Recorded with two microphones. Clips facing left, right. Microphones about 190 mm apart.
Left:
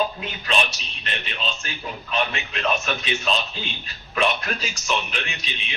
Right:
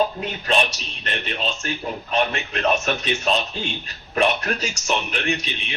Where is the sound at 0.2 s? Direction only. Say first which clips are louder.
Right 3 dB; 40° right (ahead or behind).